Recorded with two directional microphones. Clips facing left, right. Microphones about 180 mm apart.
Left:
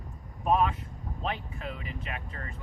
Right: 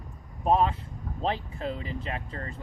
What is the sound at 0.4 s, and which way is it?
Speech, 30° right (ahead or behind).